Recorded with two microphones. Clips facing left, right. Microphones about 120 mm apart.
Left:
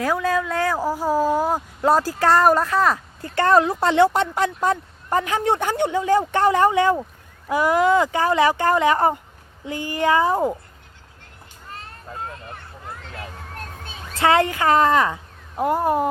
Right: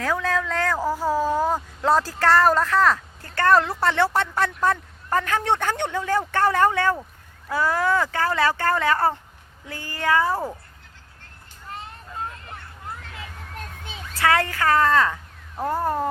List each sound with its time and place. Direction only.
0.0 s speech: 10° left (ahead or behind)
14.2 s speech: 20° left (ahead or behind)